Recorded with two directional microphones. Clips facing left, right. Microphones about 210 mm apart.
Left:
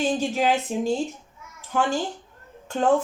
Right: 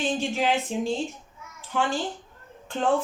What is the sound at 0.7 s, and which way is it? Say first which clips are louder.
Speech: left 2 dB; 45° left (ahead or behind).